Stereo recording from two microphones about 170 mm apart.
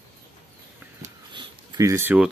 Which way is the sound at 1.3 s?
25° right (ahead or behind).